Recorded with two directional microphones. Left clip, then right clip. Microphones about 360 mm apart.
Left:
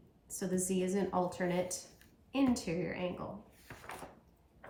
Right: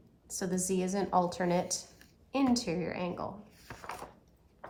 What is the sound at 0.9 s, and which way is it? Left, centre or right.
A woman's voice, right.